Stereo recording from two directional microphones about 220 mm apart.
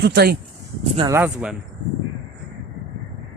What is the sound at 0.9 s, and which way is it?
Speech, 20° right (ahead or behind).